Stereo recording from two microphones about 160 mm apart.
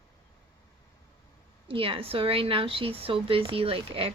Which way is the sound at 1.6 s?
35° right (ahead or behind).